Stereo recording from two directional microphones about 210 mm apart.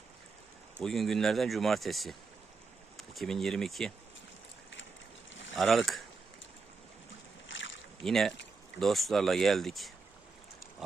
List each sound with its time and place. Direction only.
0.8 s speech: centre (ahead or behind)
5.3 s boat: 60° left (ahead or behind)
5.5 s speech: centre (ahead or behind)
7.4 s boat: 60° left (ahead or behind)
8.0 s speech: centre (ahead or behind)